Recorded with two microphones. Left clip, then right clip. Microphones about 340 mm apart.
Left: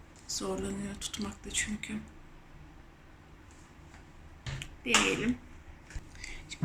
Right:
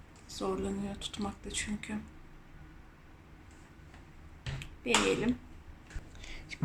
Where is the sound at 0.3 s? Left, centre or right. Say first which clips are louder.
Even; centre.